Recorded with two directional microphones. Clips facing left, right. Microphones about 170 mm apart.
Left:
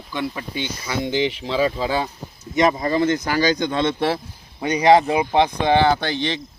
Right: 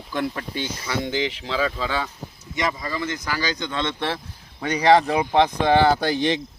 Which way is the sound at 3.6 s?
35° left (ahead or behind).